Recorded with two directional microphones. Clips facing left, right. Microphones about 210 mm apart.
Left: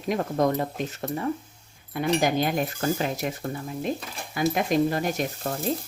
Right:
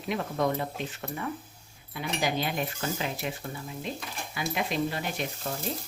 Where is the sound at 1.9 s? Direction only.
50° left (ahead or behind).